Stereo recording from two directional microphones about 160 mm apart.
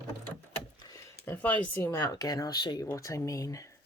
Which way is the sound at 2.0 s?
25° left (ahead or behind).